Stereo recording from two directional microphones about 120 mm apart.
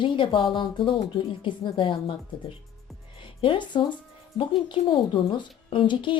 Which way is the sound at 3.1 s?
45° left (ahead or behind).